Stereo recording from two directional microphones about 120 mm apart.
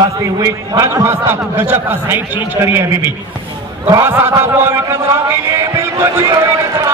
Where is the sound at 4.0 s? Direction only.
20° right (ahead or behind).